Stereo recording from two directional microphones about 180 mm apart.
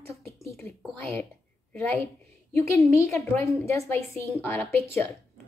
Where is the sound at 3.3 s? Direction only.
15° left (ahead or behind).